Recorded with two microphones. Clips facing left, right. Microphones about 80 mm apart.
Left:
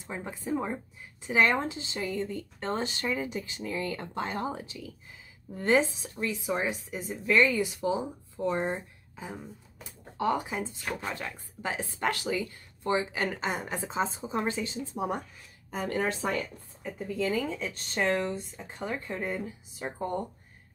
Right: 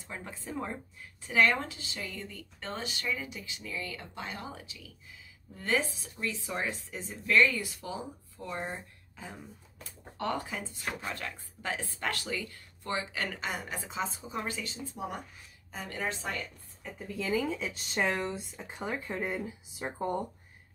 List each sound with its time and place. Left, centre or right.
0.0 s a woman's voice: centre
10.8 s speech: centre
11.1 s speech: centre
15.7 s speech: left
16.8 s speech: centre